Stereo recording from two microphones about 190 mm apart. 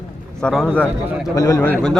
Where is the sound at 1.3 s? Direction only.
15° left (ahead or behind).